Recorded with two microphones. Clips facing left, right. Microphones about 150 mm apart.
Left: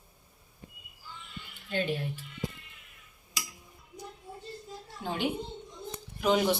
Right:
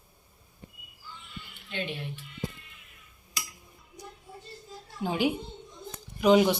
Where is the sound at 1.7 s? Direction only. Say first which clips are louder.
Left 4 dB; 40° left (ahead or behind).